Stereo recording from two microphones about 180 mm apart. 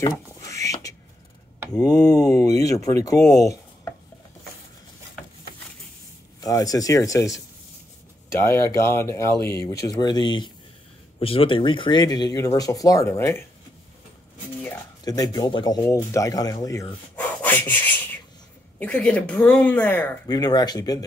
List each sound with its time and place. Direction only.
1.8 s speech: 20° left (ahead or behind)
6.4 s speech: 20° left (ahead or behind)
15.0 s speech: 20° left (ahead or behind)
20.2 s speech: 20° left (ahead or behind)